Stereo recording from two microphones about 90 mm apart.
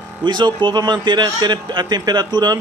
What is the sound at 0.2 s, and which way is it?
A man's voice, 55° right (ahead or behind).